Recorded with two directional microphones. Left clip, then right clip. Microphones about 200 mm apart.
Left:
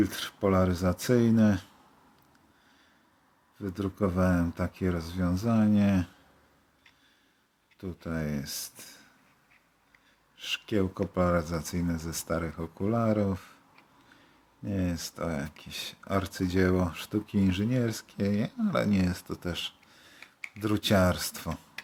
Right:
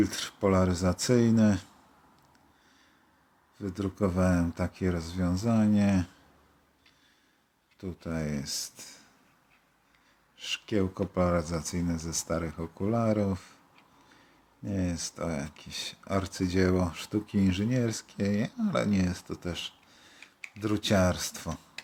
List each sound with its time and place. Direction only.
0.0 s speech: centre (ahead or behind)
3.6 s speech: centre (ahead or behind)
7.8 s speech: centre (ahead or behind)
10.3 s speech: centre (ahead or behind)